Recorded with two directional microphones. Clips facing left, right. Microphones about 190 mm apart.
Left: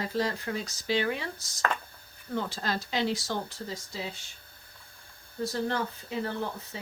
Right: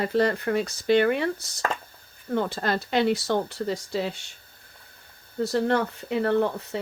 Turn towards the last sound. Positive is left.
turn(degrees=-65)  # may be behind; listen again after turning